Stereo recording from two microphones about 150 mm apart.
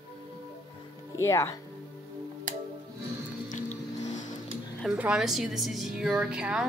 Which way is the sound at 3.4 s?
50° left (ahead or behind).